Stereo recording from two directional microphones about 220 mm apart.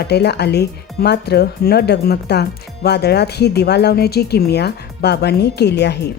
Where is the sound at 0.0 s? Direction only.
50° left (ahead or behind).